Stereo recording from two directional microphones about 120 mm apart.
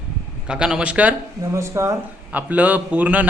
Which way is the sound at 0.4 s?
5° right (ahead or behind).